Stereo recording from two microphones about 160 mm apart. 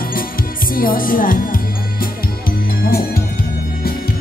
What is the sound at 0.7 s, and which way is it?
Speech, 65° left (ahead or behind).